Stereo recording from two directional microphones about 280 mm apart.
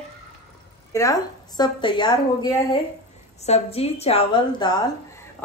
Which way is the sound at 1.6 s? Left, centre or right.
Centre.